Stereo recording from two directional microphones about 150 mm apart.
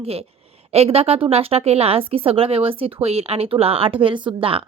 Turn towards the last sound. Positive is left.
turn(degrees=-35)  # may be behind; listen again after turning